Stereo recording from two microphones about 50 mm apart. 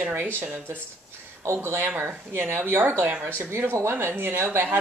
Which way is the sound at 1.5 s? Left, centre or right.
Right.